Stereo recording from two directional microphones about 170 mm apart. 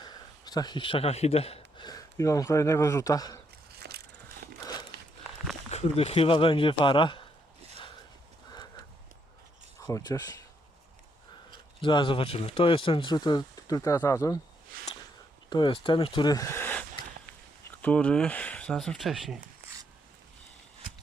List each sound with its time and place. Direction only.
0.0 s speech: 25° left (ahead or behind)
3.8 s crushing: 65° right (ahead or behind)
4.6 s a sound: 25° left (ahead or behind)
5.7 s speech: 35° left (ahead or behind)
9.8 s speech: 20° left (ahead or behind)
11.8 s speech: 30° left (ahead or behind)
14.7 s a sound: 55° right (ahead or behind)
15.4 s speech: 25° left (ahead or behind)
17.8 s speech: 10° left (ahead or behind)